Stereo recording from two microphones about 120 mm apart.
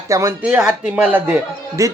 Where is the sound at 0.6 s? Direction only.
5° right (ahead or behind).